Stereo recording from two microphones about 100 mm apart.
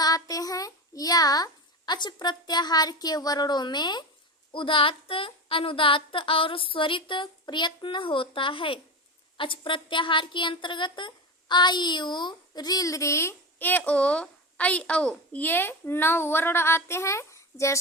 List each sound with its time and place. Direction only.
0.0 s child singing: 40° left (ahead or behind)
1.9 s a woman's voice: 45° left (ahead or behind)
4.5 s a woman's voice: 60° left (ahead or behind); by 17.7 s 30° left (ahead or behind)